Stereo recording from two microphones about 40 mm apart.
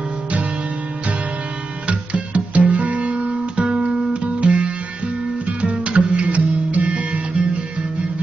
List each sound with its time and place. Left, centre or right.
1.9 s music: right